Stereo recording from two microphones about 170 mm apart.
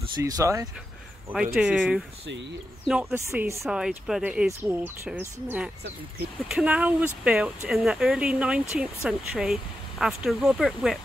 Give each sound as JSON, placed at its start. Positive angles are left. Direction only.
{"t": 0.2, "sound": "speech", "side_deg": -20}
{"t": 1.6, "sound": "speech", "side_deg": -5}
{"t": 3.6, "sound": "speech", "side_deg": -5}